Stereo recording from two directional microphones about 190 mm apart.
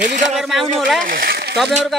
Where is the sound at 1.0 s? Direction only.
50° right (ahead or behind).